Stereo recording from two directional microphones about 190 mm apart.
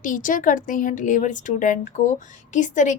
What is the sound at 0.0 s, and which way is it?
A woman's voice, 45° left (ahead or behind).